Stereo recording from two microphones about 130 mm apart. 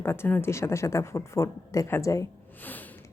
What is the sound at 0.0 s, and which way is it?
Speech, 20° left (ahead or behind).